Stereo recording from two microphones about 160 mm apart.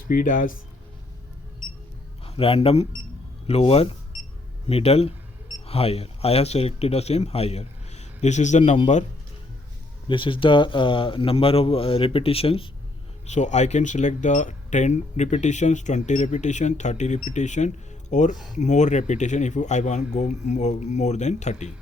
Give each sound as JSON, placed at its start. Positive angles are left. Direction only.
{"t": 0.1, "sound": "speech", "side_deg": 55}
{"t": 2.2, "sound": "a man's voice", "side_deg": 35}
{"t": 10.1, "sound": "speech", "side_deg": 30}